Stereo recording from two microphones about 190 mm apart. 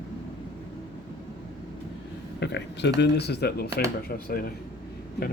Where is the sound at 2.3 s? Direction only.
65° left (ahead or behind).